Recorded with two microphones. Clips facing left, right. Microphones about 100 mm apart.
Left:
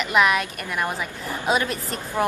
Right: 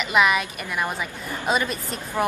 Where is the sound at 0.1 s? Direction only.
Centre (ahead or behind).